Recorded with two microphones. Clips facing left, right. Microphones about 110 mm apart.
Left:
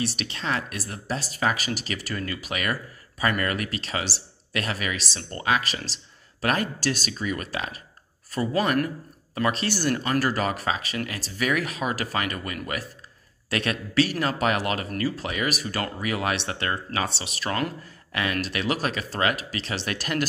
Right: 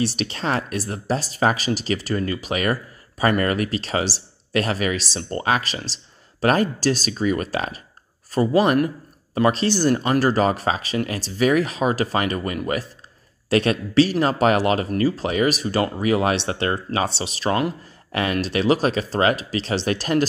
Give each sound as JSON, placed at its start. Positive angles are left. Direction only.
{"t": 0.0, "sound": "speech", "side_deg": -35}